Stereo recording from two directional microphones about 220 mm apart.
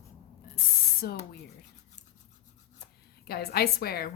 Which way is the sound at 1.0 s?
45° left (ahead or behind).